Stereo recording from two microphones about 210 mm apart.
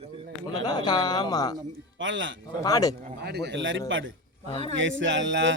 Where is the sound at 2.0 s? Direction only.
65° right (ahead or behind).